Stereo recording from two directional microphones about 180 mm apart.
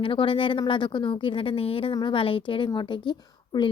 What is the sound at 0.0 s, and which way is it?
Speech, 30° left (ahead or behind).